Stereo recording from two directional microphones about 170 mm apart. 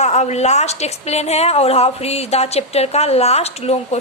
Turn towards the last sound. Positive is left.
turn(degrees=40)  # may be behind; listen again after turning